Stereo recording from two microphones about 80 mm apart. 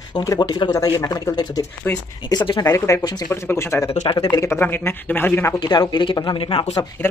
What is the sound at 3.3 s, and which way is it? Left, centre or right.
Speech, left.